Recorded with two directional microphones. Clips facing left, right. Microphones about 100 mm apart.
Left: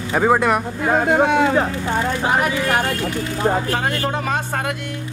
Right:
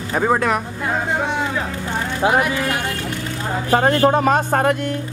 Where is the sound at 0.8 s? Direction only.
55° left (ahead or behind).